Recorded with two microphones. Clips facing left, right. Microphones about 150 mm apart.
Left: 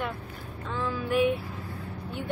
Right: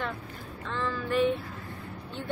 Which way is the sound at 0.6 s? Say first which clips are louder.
Left 1 dB; 10° left (ahead or behind).